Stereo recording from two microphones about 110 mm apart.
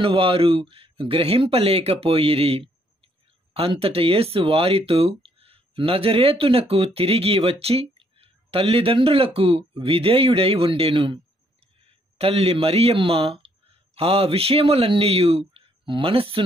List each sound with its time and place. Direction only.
0.0 s speech: 55° right (ahead or behind)
12.2 s speech: 65° right (ahead or behind)